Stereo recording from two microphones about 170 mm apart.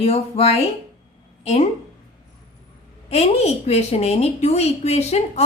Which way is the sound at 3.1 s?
40° left (ahead or behind).